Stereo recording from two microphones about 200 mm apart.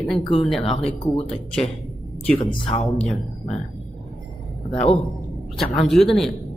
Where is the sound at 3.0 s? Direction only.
Centre (ahead or behind).